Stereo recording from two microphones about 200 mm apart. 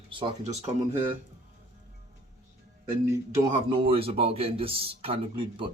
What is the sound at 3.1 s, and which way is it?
Speech, 15° right (ahead or behind).